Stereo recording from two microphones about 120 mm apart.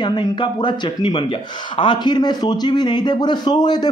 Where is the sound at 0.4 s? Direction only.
40° left (ahead or behind).